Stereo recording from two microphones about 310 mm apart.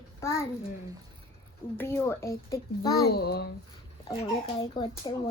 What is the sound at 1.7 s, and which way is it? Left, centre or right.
Speech, centre.